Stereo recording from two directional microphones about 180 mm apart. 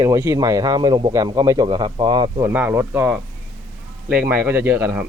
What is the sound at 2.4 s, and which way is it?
Speech, 10° right (ahead or behind).